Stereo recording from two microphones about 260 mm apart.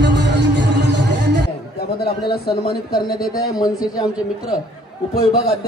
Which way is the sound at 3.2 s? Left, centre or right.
Centre.